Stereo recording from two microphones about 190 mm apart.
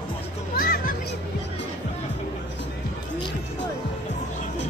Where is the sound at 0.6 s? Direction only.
50° left (ahead or behind).